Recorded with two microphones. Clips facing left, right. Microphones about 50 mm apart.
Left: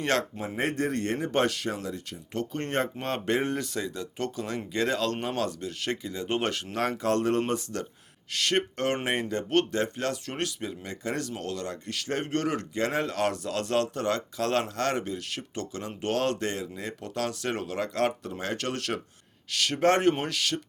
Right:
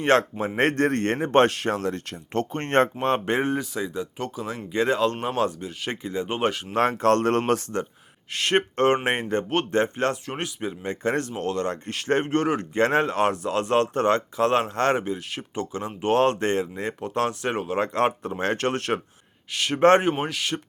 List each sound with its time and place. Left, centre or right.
0.0 s speech: right
0.5 s a man's voice: right
1.7 s a man's voice: right
3.0 s speech: right
3.6 s speech: centre
6.2 s speech: centre
6.7 s a man's voice: right
8.3 s speech: right
10.2 s speech: centre
11.0 s speech: right
12.7 s speech: right
20.0 s speech: centre